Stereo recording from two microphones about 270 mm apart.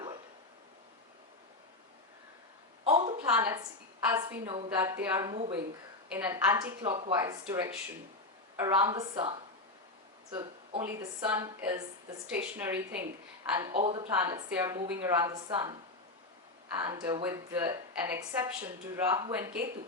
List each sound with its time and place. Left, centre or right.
2.8 s a sound: right
4.1 s a woman's voice: centre
4.8 s a woman's voice: centre
13.7 s a woman's voice: right
14.2 s a woman's voice: centre